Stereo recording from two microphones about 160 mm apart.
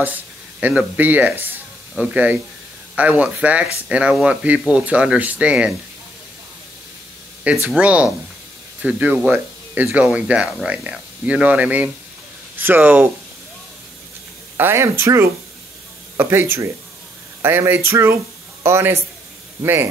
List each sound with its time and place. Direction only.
0.0 s speech: 10° right (ahead or behind)
7.7 s speech: 10° right (ahead or behind)
14.6 s a man's voice: 15° right (ahead or behind)